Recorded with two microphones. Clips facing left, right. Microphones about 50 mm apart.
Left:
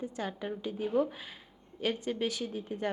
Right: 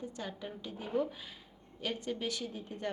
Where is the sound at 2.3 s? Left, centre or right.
Centre.